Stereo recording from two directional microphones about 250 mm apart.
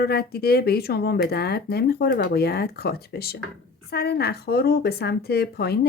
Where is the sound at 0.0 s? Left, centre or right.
Left.